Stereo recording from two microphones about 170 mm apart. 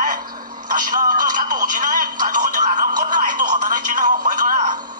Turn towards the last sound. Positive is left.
turn(degrees=-50)  # may be behind; listen again after turning